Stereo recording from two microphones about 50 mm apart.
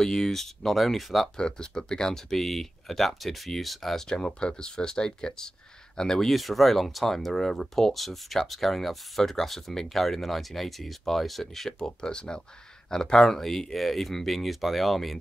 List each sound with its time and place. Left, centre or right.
0.0 s speech: centre
1.3 s speech: centre
6.3 s speech: centre
12.0 s speech: centre